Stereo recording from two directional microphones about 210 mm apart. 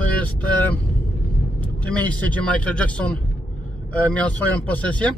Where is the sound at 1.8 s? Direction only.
5° left (ahead or behind).